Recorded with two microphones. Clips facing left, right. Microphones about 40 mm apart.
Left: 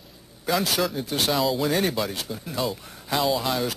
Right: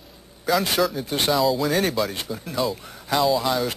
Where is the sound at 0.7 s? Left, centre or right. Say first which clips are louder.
Right 3 dB; centre.